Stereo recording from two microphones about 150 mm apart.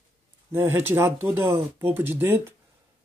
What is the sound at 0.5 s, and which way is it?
Speech, 15° right (ahead or behind).